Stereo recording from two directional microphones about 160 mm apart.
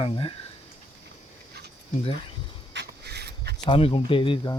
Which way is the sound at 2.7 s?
90° right.